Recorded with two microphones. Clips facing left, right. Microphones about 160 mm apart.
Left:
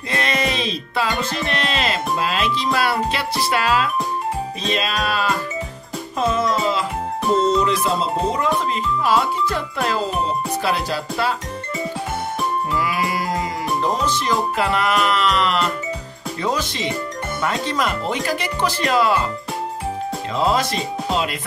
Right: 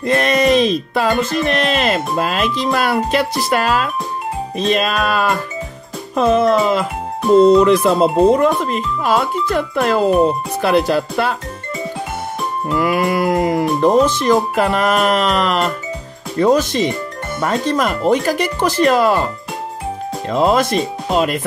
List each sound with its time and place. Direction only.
0.0 s music: 45° right (ahead or behind)
6.1 s speech: 55° right (ahead or behind)
12.7 s music: 50° right (ahead or behind)
20.2 s music: 50° right (ahead or behind)